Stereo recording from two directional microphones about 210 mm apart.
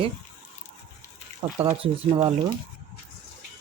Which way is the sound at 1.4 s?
20° right (ahead or behind).